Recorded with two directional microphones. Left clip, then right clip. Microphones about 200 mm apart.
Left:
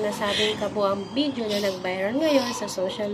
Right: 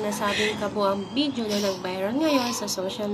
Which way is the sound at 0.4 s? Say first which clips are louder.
Left 1 dB; 5° right (ahead or behind).